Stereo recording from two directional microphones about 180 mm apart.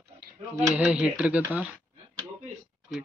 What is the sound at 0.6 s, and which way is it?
Speech, 5° right (ahead or behind).